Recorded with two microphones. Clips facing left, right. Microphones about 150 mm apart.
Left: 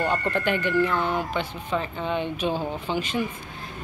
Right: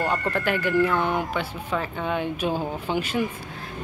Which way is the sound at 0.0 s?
5° right (ahead or behind).